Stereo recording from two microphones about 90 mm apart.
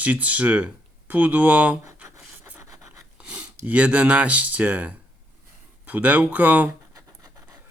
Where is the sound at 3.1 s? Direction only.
15° right (ahead or behind).